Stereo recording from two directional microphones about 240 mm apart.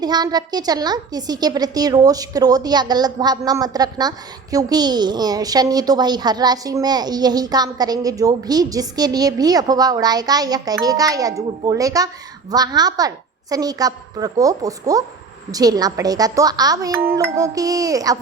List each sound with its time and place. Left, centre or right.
0.0 s a woman's voice: centre